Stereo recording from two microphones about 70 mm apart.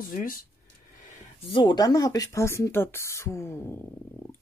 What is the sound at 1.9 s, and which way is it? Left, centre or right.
Speech, left.